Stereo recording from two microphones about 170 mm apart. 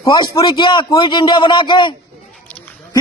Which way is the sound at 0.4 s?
30° left (ahead or behind).